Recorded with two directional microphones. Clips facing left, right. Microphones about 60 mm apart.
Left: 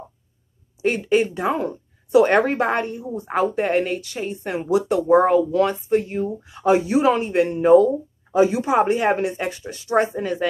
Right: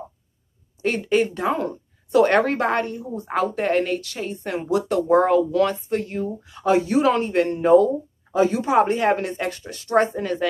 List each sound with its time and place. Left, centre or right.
0.8 s speech: centre